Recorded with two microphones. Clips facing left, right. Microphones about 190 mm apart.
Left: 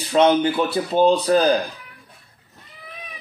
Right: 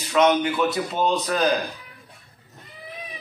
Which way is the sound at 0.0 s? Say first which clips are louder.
Left 3 dB; 30° left (ahead or behind).